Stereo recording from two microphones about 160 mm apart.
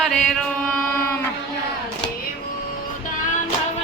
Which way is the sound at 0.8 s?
10° left (ahead or behind).